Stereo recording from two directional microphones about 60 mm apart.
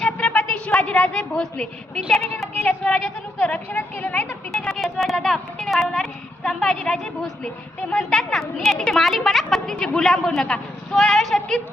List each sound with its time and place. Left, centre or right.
0.3 s a sound: centre
2.0 s a woman's voice: centre; by 4.3 s left
4.8 s a woman's voice: centre